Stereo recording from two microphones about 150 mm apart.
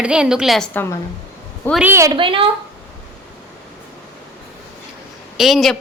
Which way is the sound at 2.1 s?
35° right (ahead or behind).